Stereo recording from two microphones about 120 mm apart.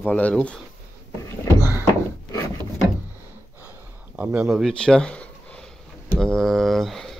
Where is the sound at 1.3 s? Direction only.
25° left (ahead or behind).